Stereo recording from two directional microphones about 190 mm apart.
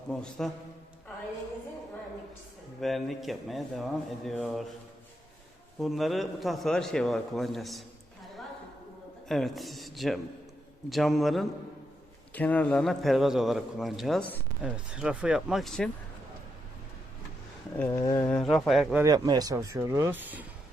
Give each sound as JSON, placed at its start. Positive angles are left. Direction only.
{"t": 0.1, "sound": "a man's voice", "side_deg": 5}
{"t": 2.8, "sound": "a man's voice", "side_deg": 0}
{"t": 5.8, "sound": "a man's voice", "side_deg": 0}
{"t": 9.3, "sound": "a man's voice", "side_deg": 0}
{"t": 17.7, "sound": "speech", "side_deg": 15}
{"t": 18.3, "sound": "a man's voice", "side_deg": 5}
{"t": 19.0, "sound": "speech", "side_deg": -20}